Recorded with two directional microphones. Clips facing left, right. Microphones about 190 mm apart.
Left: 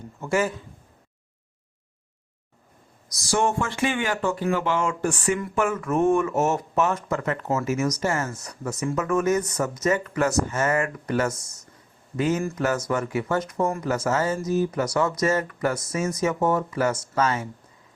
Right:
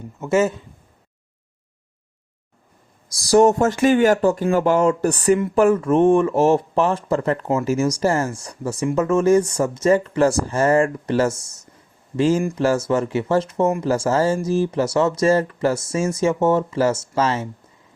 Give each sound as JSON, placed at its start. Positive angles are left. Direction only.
{"t": 0.2, "sound": "speech", "side_deg": -25}
{"t": 3.1, "sound": "speech", "side_deg": -35}